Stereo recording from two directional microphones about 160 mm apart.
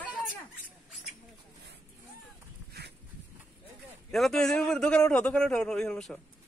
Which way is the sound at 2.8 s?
90° right.